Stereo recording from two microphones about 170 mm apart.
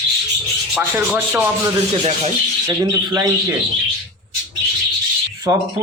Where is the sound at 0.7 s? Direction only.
5° right (ahead or behind).